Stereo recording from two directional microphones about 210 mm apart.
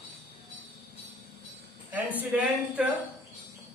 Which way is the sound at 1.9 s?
5° right (ahead or behind).